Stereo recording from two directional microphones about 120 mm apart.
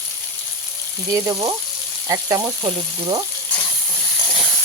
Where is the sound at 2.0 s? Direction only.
30° right (ahead or behind).